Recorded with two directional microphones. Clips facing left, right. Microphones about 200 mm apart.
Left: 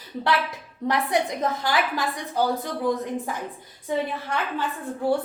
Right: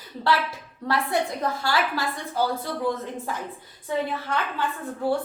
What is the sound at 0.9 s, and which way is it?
A woman's voice, 20° left (ahead or behind).